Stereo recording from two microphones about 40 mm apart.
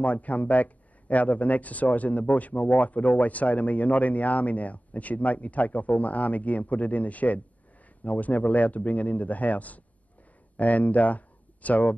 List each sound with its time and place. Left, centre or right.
0.0 s speech: left